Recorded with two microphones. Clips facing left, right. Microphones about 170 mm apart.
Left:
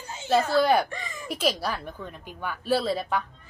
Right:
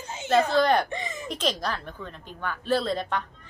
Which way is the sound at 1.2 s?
5° left (ahead or behind).